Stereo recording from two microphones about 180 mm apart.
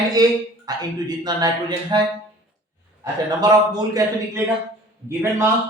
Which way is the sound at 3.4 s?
20° right (ahead or behind).